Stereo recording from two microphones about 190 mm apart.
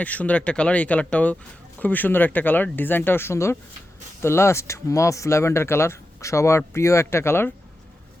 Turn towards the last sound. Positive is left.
turn(degrees=10)  # may be behind; listen again after turning